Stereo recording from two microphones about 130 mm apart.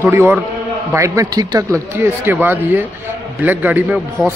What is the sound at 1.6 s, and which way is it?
A man's voice, 20° right (ahead or behind).